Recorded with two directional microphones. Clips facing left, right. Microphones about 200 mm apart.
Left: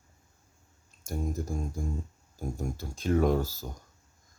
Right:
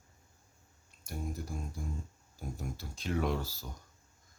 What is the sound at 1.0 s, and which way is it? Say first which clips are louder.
Speech: left 7 dB; 45° left (ahead or behind).